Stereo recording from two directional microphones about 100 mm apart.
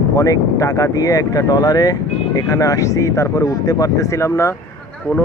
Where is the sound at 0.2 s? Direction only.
35° left (ahead or behind).